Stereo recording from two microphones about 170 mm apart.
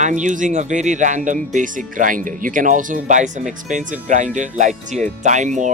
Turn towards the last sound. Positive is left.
turn(degrees=-45)  # may be behind; listen again after turning